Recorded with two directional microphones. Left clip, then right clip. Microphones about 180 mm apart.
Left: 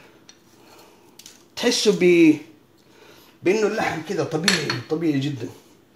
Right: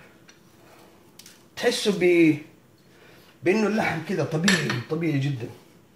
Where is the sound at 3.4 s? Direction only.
40° left (ahead or behind).